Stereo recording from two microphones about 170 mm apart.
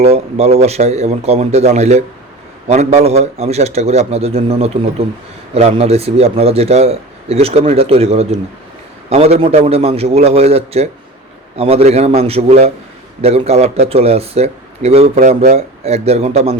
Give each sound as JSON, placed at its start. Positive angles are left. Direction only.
{"t": 0.0, "sound": "a man's voice", "side_deg": -40}